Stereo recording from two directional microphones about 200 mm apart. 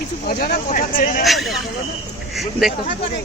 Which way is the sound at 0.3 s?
50° left (ahead or behind).